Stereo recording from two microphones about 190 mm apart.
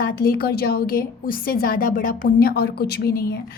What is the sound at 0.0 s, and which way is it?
A woman's voice, 50° left (ahead or behind).